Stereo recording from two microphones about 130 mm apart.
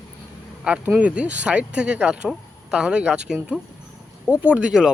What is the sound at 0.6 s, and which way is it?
Speech, 10° right (ahead or behind).